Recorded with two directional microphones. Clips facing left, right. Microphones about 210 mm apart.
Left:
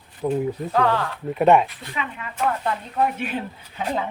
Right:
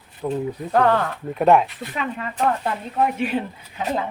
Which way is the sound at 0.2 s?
15° left (ahead or behind).